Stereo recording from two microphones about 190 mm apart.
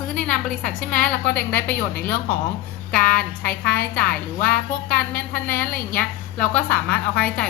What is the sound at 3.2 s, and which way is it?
Speech, 55° left (ahead or behind).